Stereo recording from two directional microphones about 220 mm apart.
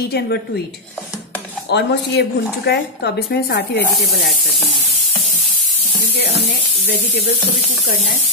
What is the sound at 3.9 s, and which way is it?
Snake, centre (ahead or behind).